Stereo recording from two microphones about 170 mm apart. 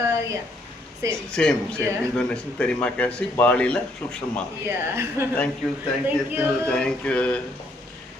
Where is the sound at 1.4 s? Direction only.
5° left (ahead or behind).